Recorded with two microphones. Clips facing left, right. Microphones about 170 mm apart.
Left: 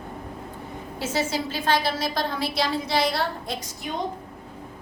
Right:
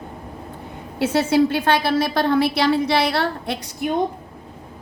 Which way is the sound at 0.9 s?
65° right (ahead or behind).